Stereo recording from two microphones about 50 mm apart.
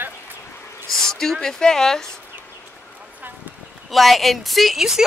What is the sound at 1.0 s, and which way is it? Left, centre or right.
Speech, centre.